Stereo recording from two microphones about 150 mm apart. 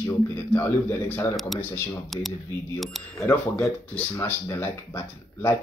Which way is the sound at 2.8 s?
Centre (ahead or behind).